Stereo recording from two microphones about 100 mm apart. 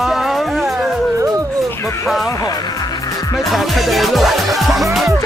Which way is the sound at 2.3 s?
35° left (ahead or behind).